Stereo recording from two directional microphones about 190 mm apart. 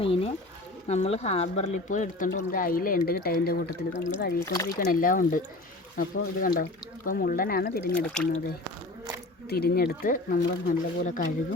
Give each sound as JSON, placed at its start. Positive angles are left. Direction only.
{"t": 0.0, "sound": "speech", "side_deg": 30}
{"t": 3.9, "sound": "speech", "side_deg": 65}
{"t": 4.4, "sound": "speech", "side_deg": 15}
{"t": 4.8, "sound": "speech", "side_deg": 50}
{"t": 7.9, "sound": "speech", "side_deg": 5}
{"t": 9.5, "sound": "speech", "side_deg": 55}